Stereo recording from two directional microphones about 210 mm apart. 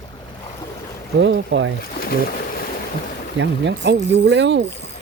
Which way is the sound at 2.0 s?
45° left (ahead or behind).